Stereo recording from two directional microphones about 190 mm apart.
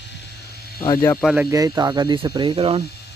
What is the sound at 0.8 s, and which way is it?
Speech, 15° left (ahead or behind).